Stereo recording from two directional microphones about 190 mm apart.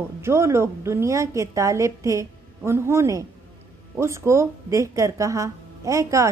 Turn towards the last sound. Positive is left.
turn(degrees=-15)  # may be behind; listen again after turning